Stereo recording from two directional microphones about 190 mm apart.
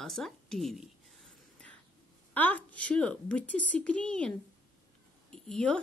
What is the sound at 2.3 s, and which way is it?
Speech, 10° left (ahead or behind).